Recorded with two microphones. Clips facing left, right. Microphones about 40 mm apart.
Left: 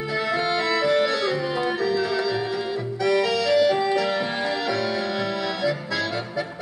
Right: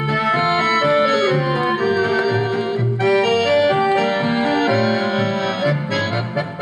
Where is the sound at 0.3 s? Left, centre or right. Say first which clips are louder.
Right 6 dB; right.